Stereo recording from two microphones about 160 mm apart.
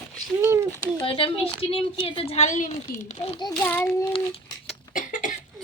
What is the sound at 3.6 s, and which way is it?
Speech, 10° left (ahead or behind).